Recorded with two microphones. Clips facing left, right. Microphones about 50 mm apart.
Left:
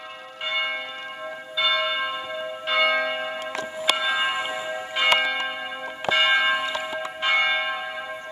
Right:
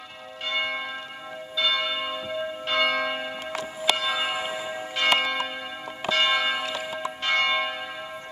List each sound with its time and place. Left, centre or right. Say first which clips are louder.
0.5 s church bell: left 1 dB; centre